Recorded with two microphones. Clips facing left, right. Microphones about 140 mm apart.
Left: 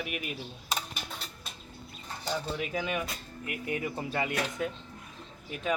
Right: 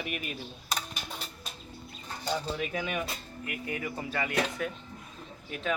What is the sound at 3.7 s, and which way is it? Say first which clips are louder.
Speech: left 3 dB; 20° left (ahead or behind).